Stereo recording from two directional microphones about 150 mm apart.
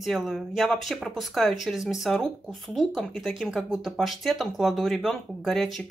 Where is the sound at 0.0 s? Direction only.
Centre (ahead or behind).